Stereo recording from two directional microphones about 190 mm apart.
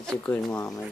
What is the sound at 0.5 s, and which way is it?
Speech, 20° left (ahead or behind).